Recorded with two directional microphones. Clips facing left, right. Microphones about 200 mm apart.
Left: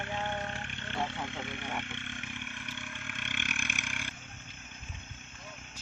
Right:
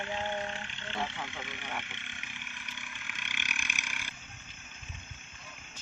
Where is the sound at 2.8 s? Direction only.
55° left (ahead or behind).